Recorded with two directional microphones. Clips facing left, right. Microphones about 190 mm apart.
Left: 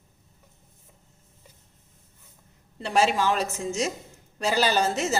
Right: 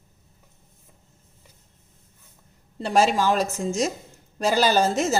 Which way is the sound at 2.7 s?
45° right (ahead or behind).